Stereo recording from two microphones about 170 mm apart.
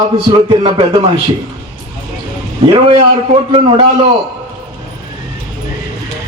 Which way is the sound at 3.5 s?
30° right (ahead or behind).